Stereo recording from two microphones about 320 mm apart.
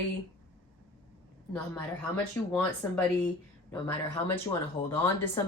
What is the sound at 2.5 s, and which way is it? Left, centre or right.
Speech, centre.